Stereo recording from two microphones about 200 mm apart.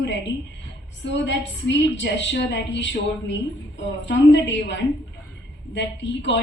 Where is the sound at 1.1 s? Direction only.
60° left (ahead or behind).